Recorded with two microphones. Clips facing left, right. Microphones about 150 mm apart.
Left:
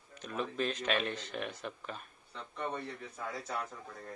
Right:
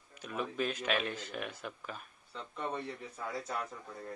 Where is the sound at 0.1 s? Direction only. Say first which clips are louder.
Left 1 dB; 5° right (ahead or behind).